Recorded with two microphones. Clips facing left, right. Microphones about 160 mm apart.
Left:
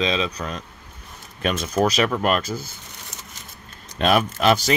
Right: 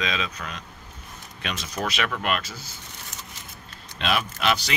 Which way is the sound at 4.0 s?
45° left (ahead or behind).